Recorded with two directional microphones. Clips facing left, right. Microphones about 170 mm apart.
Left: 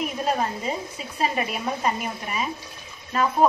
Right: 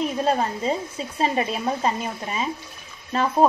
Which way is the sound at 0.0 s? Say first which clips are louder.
Right 3 dB; 30° right (ahead or behind).